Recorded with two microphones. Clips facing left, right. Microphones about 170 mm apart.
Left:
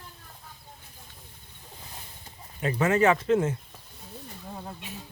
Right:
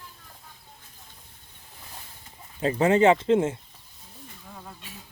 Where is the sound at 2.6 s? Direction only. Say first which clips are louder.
Right 3 dB; 30° right (ahead or behind).